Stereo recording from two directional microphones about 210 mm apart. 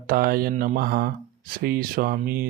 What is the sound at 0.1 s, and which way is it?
Speech, 45° right (ahead or behind).